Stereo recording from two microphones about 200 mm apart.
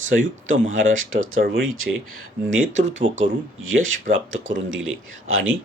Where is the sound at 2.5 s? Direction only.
75° right (ahead or behind).